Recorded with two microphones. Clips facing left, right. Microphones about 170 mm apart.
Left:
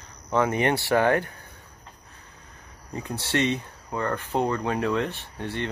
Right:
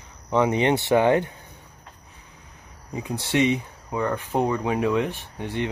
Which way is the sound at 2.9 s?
10° right (ahead or behind).